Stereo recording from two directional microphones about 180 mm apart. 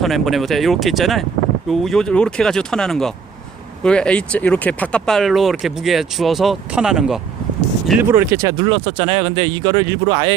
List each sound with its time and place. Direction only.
0.0 s speech: centre (ahead or behind)
8.1 s speech: 20° right (ahead or behind)